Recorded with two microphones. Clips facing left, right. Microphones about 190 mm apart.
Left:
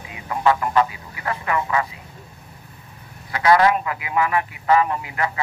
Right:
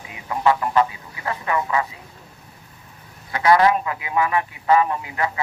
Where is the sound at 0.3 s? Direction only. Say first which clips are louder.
Even; 25° right (ahead or behind).